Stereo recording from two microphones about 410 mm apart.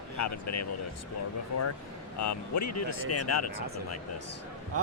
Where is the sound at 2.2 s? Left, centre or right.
Left.